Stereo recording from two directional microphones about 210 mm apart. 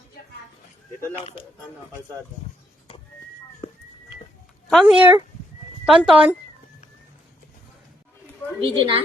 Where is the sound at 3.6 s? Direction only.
25° left (ahead or behind).